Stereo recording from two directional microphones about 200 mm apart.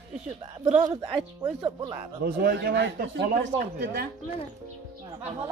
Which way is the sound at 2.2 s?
45° right (ahead or behind).